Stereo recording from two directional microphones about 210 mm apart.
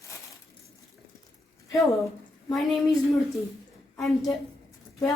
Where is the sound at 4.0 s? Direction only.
Centre (ahead or behind).